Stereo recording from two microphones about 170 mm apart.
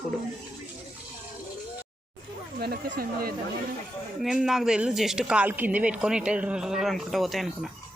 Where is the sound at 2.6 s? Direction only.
70° right (ahead or behind).